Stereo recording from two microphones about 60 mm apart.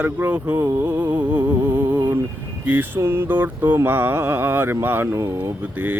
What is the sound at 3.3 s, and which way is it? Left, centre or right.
Speech, right.